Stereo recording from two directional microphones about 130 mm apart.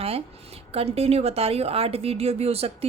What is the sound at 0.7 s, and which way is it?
A woman's voice, 50° right (ahead or behind).